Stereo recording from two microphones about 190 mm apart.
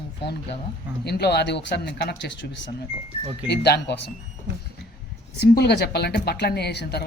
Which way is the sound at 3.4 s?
60° left (ahead or behind).